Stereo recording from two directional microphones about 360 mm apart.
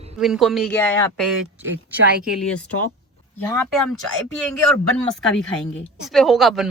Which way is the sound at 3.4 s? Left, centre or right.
Centre.